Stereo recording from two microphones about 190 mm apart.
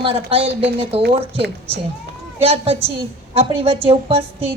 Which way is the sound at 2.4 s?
30° right (ahead or behind).